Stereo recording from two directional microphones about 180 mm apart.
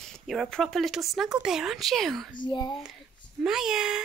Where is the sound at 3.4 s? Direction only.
5° right (ahead or behind).